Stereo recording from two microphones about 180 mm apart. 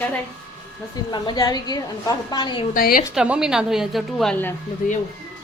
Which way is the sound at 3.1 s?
5° right (ahead or behind).